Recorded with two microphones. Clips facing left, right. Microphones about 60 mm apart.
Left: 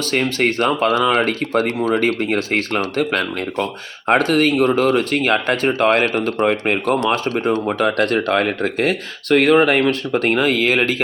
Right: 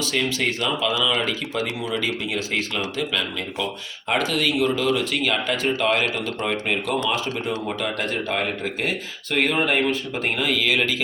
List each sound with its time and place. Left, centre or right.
0.0 s speech: left
7.0 s speech: left
7.3 s speech: left